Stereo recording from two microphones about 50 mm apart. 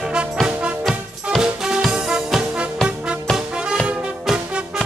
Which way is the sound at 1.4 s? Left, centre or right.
Centre.